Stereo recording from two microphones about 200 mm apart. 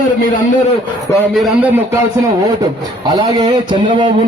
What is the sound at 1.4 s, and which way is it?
Speech, 10° right (ahead or behind).